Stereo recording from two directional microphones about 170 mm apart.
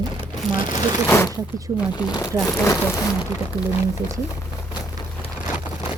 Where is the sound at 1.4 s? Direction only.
20° right (ahead or behind).